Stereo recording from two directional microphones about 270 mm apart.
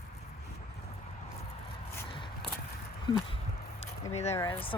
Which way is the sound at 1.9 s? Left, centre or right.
Centre.